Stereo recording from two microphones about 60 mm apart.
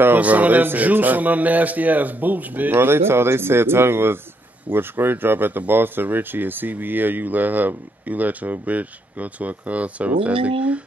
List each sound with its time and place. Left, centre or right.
0.2 s speech: right
2.7 s speech: right